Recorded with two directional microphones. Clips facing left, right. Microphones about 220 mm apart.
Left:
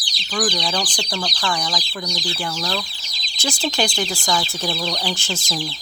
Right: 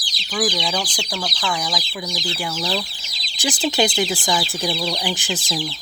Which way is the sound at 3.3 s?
15° right (ahead or behind).